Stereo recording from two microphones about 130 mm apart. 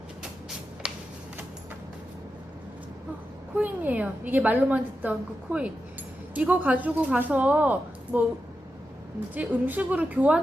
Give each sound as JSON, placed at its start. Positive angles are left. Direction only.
{"t": 3.5, "sound": "a woman's voice", "side_deg": -10}
{"t": 9.3, "sound": "a woman's voice", "side_deg": -15}